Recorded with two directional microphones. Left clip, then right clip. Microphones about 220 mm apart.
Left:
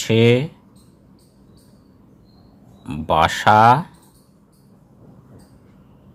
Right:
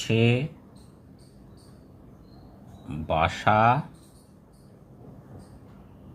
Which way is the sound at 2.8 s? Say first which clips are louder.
Left 8 dB; 55° left (ahead or behind).